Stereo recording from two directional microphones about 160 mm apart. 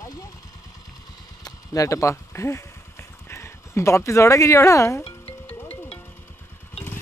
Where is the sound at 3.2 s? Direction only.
15° left (ahead or behind).